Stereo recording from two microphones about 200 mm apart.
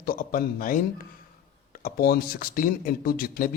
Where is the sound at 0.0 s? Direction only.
45° left (ahead or behind).